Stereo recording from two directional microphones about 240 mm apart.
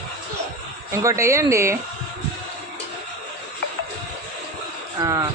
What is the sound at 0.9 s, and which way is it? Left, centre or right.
Speech, centre.